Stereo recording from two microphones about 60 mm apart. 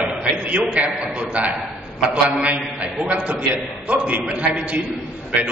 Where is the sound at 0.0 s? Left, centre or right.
Right.